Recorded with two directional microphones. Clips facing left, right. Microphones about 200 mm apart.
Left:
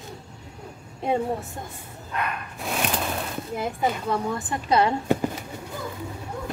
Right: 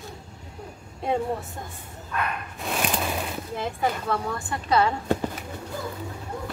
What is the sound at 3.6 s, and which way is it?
Speech, 20° left (ahead or behind).